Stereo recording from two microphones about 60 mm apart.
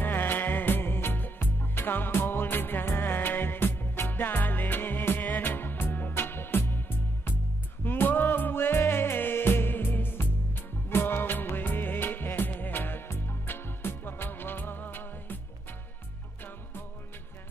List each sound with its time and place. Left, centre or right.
0.0 s music: left